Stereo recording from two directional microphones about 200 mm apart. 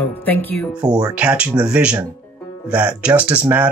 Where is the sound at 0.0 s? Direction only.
10° left (ahead or behind).